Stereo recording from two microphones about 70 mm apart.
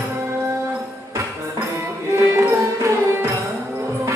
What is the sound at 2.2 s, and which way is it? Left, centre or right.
Music, right.